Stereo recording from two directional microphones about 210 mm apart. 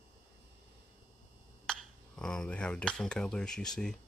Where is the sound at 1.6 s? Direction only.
5° left (ahead or behind).